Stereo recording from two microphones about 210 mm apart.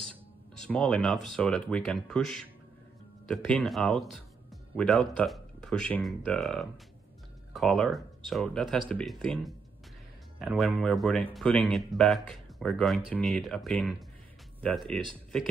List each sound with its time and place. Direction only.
0.1 s speech: 5° left (ahead or behind)